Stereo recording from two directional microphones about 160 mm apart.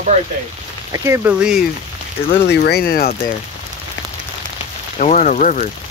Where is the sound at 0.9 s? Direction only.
15° right (ahead or behind).